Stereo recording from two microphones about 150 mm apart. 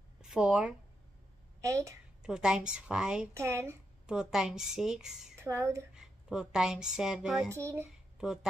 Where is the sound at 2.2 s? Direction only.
5° right (ahead or behind).